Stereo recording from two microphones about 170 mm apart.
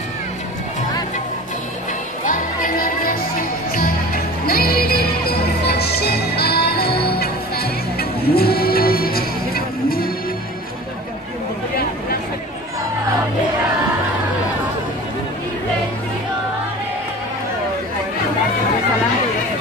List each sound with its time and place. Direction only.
2.2 s music: 55° left (ahead or behind)